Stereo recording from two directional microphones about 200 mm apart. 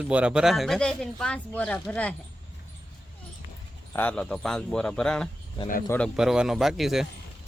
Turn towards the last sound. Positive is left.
turn(degrees=0)  # may be behind; listen again after turning